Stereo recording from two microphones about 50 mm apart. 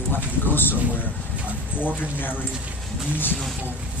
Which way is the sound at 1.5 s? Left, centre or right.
Right.